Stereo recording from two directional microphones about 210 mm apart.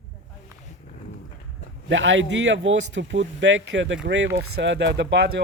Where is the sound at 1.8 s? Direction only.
65° right (ahead or behind).